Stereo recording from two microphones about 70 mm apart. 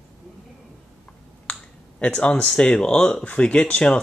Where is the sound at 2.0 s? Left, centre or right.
Centre.